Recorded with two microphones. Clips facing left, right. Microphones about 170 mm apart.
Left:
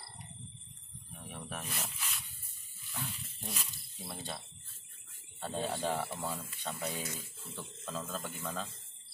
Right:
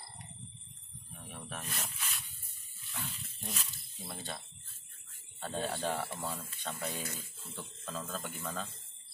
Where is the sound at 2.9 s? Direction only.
5° left (ahead or behind).